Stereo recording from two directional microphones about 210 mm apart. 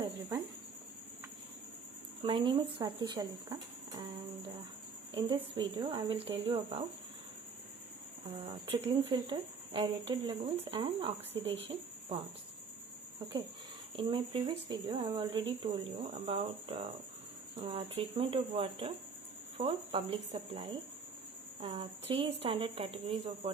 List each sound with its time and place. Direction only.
0.0 s cricket: 15° right (ahead or behind)
2.2 s speech: 25° right (ahead or behind)
5.1 s speech: 25° right (ahead or behind)
8.4 s speech: 25° right (ahead or behind)
13.9 s speech: 25° right (ahead or behind)
21.7 s speech: 30° right (ahead or behind)